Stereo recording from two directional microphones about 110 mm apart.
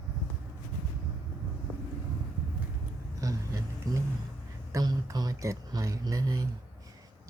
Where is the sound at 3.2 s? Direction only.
30° right (ahead or behind).